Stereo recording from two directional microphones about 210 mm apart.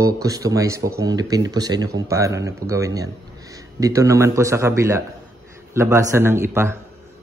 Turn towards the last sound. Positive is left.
turn(degrees=-10)  # may be behind; listen again after turning